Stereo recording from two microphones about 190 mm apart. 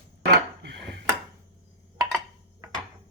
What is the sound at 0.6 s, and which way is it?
Dishes, 65° right (ahead or behind).